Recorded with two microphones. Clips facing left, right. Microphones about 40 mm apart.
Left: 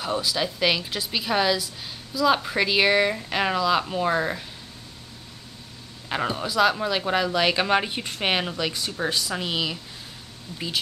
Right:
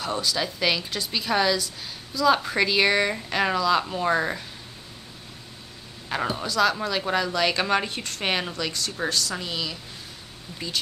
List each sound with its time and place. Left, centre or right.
0.0 s speech: centre
6.0 s speech: centre